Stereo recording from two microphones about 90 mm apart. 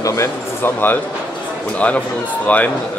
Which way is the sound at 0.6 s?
25° left (ahead or behind).